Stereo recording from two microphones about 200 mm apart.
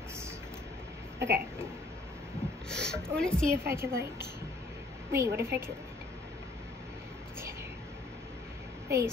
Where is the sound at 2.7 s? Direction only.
5° left (ahead or behind).